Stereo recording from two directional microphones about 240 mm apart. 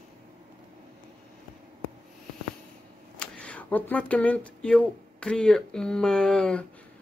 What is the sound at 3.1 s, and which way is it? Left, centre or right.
Speech, centre.